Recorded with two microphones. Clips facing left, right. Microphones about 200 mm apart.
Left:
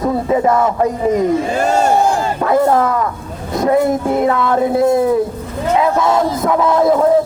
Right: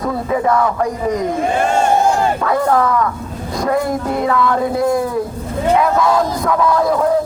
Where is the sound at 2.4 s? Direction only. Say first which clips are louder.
Left 2 dB; 25° left (ahead or behind).